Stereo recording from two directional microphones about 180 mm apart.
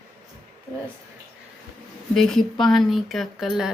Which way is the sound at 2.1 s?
Centre (ahead or behind).